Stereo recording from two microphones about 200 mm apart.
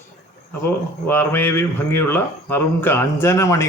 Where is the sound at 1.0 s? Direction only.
10° left (ahead or behind).